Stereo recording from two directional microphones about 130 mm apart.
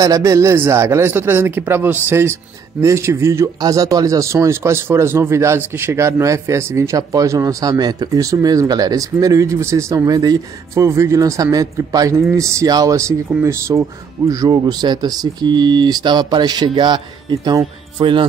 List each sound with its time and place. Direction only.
0.0 s speech: 25° right (ahead or behind)